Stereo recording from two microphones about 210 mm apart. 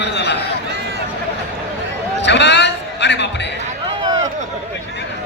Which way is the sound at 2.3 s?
55° left (ahead or behind).